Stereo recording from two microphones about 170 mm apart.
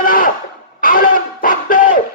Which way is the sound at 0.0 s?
55° left (ahead or behind).